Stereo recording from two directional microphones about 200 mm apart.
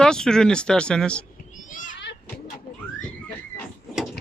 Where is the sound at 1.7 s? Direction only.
40° left (ahead or behind).